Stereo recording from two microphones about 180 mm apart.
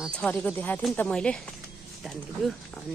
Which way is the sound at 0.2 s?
10° left (ahead or behind).